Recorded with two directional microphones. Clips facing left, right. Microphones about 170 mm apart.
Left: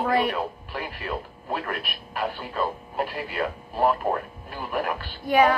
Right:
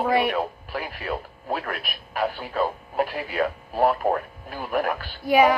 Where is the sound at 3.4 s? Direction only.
50° right (ahead or behind).